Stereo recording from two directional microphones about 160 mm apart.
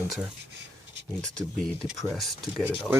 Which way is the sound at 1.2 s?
5° left (ahead or behind).